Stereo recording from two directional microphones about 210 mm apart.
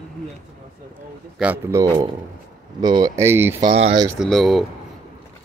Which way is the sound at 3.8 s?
30° right (ahead or behind).